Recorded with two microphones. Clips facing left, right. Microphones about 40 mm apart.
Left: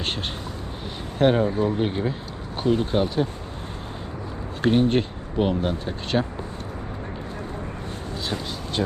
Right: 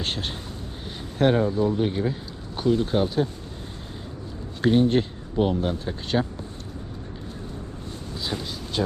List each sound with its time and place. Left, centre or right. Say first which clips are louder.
1.2 s speech: left 1 dB; centre
1.5 s speech: even; left
2.8 s speech: even; centre
4.6 s speech: even; centre